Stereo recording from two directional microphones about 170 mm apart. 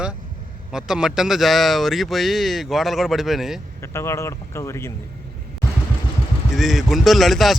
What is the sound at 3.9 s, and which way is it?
Speech, 15° left (ahead or behind).